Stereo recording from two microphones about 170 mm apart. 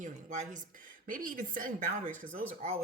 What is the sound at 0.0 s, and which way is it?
A woman's voice, 45° right (ahead or behind).